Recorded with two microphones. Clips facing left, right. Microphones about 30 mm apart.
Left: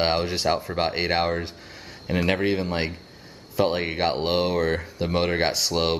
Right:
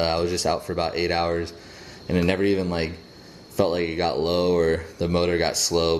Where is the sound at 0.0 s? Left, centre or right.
Centre.